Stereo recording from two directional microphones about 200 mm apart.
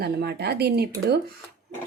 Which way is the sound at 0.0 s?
55° right (ahead or behind).